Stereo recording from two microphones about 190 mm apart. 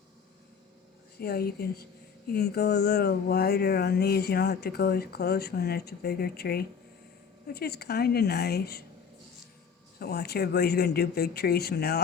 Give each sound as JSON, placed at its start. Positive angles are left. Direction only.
{"t": 1.2, "sound": "speech", "side_deg": 55}
{"t": 10.0, "sound": "speech", "side_deg": 55}